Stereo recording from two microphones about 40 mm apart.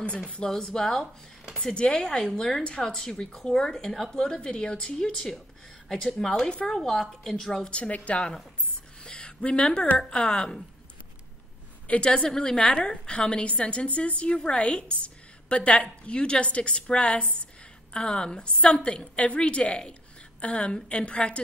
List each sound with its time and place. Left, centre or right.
0.5 s a woman's voice: centre
1.6 s a woman's voice: left
2.6 s a woman's voice: left
3.7 s a woman's voice: centre
4.2 s a woman's voice: centre
5.9 s a woman's voice: centre
7.7 s a woman's voice: left
9.0 s a sound: left
9.9 s a woman's voice: centre
12.0 s a woman's voice: left